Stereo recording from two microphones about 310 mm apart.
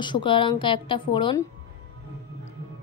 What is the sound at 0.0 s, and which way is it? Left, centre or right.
A woman's voice, centre.